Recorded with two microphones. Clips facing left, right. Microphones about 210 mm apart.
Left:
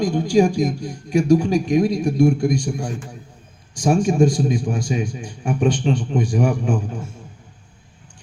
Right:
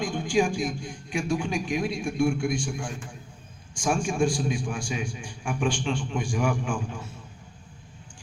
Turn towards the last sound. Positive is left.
turn(degrees=40)  # may be behind; listen again after turning